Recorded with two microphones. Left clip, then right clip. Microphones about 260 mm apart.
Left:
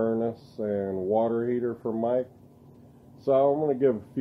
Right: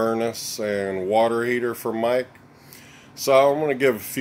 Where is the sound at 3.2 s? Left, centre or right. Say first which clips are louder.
Right 5 dB; centre.